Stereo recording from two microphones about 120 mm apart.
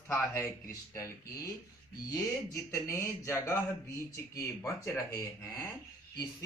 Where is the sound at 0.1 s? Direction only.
20° left (ahead or behind).